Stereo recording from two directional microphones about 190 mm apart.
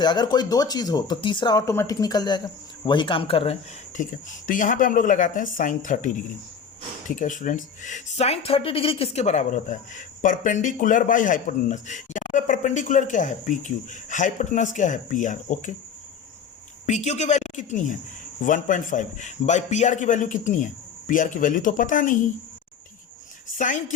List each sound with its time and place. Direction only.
0.0 s speech: 20° left (ahead or behind); by 6.1 s 40° left (ahead or behind)
7.2 s speech: 45° left (ahead or behind)
16.8 s speech: 35° left (ahead or behind)
23.6 s speech: 40° left (ahead or behind)